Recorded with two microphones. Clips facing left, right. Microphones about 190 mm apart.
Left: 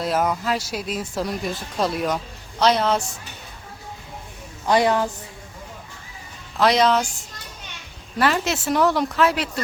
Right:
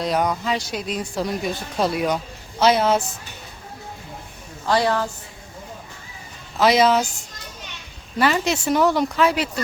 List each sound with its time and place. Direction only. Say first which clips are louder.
0.0 s speech: even; 5° left (ahead or behind)
4.6 s a woman's voice: left 2 dB; 20° left (ahead or behind)
6.6 s speech: right 1 dB; 5° right (ahead or behind)